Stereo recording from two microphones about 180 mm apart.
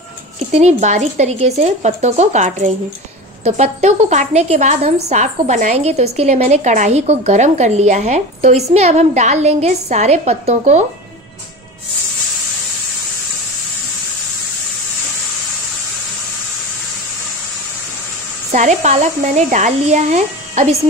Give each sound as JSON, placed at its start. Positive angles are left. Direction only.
{"t": 0.6, "sound": "a woman's voice", "side_deg": -40}
{"t": 18.5, "sound": "a woman's voice", "side_deg": -45}